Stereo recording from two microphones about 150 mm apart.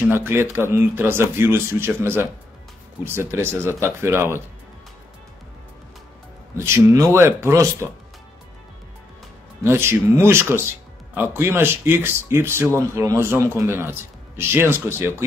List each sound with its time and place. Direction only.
0.0 s speech: 15° right (ahead or behind)
6.6 s speech: 20° right (ahead or behind)
9.6 s speech: 15° right (ahead or behind)